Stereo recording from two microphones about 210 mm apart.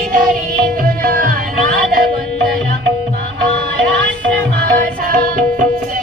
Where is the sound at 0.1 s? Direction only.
40° right (ahead or behind).